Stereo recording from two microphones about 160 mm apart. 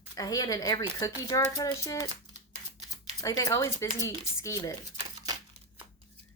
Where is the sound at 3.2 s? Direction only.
20° left (ahead or behind).